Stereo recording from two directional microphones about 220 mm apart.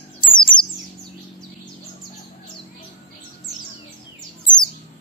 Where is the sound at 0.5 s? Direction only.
35° left (ahead or behind).